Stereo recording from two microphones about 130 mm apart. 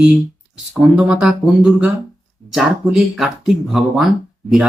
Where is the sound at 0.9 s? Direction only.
5° right (ahead or behind).